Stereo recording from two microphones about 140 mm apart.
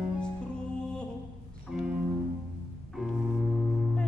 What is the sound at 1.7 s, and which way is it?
Music, 5° right (ahead or behind).